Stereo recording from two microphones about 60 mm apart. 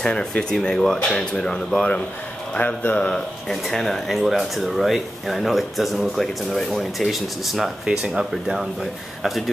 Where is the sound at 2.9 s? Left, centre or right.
Centre.